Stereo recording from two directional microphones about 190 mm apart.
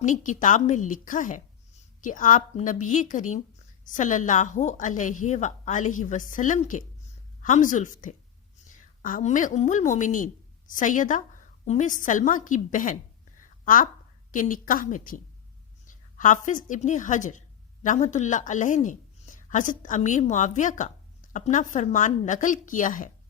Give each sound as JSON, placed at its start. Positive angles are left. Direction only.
{"t": 0.0, "sound": "a woman's voice", "side_deg": 40}
{"t": 14.3, "sound": "a woman's voice", "side_deg": 45}